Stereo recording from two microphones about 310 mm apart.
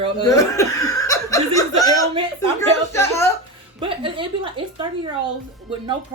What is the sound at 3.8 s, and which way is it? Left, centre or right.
A woman's voice, centre.